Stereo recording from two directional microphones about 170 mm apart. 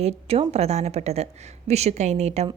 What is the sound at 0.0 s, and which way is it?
A woman's voice, 35° right (ahead or behind).